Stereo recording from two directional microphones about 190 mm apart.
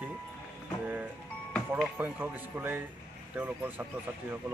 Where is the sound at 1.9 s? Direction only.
10° right (ahead or behind).